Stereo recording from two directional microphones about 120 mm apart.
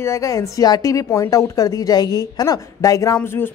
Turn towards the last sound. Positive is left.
turn(degrees=20)  # may be behind; listen again after turning